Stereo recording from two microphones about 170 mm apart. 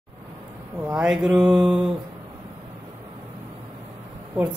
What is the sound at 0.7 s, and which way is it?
Speech, 5° right (ahead or behind).